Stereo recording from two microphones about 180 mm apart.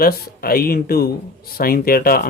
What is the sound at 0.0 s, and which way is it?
Speech, 55° left (ahead or behind).